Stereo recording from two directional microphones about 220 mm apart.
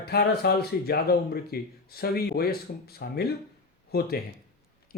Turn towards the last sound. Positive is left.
turn(degrees=45)  # may be behind; listen again after turning